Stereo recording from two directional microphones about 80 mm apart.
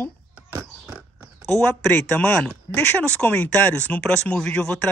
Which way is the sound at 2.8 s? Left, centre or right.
Left.